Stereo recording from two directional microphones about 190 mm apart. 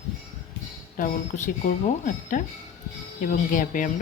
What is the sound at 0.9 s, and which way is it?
Speech, 45° left (ahead or behind).